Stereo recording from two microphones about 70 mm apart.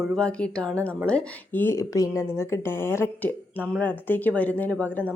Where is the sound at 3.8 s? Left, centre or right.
Left.